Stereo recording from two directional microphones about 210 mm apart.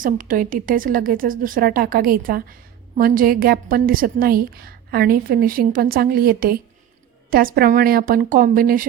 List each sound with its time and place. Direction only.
0.0 s a woman's voice: 40° right (ahead or behind)